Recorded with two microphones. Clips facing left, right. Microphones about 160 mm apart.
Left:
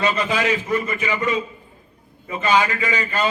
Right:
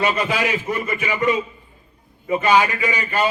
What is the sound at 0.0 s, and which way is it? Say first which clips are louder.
A man's voice: even; 15° right (ahead or behind).